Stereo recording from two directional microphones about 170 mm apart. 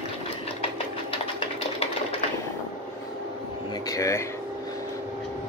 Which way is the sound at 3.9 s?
15° left (ahead or behind).